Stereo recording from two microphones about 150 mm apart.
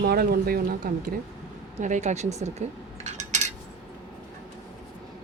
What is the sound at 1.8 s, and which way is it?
Cutlery, 55° right (ahead or behind).